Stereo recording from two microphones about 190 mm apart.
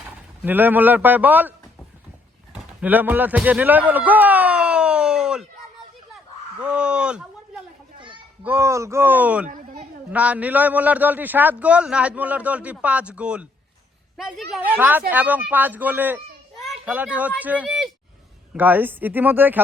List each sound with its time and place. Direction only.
0.0 s a man's voice: 10° right (ahead or behind)
6.6 s speech: 5° right (ahead or behind)
7.9 s a sound: 25° right (ahead or behind)
8.4 s a man's voice: 15° right (ahead or behind)
9.5 s a sound: 45° right (ahead or behind)
10.1 s a man's voice: 5° right (ahead or behind)
14.5 s a man's voice: 10° right (ahead or behind)